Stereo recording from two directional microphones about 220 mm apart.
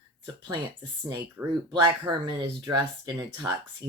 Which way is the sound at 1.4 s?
10° right (ahead or behind).